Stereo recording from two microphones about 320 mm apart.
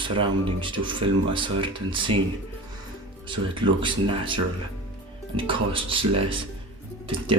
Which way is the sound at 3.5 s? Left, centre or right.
Centre.